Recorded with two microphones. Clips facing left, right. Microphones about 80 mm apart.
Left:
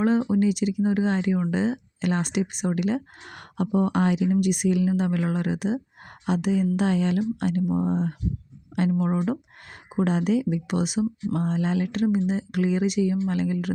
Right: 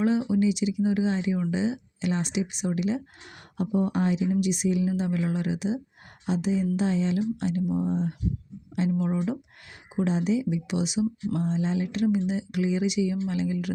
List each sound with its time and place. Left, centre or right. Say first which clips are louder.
0.0 s speech: left 2 dB; left
11.9 s speech: left 1 dB; left